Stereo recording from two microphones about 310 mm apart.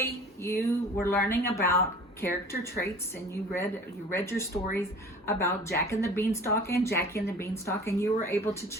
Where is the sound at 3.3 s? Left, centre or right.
Centre.